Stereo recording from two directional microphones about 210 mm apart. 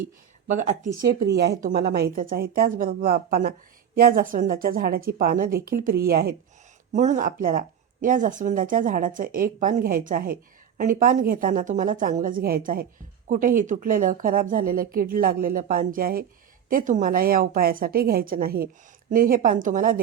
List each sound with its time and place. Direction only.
0.0 s speech: 35° right (ahead or behind)
1.0 s a woman's voice: 50° right (ahead or behind)
6.9 s a woman's voice: 35° right (ahead or behind)